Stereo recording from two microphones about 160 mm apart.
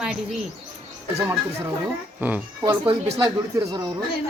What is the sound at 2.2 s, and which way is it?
Speech, 10° right (ahead or behind).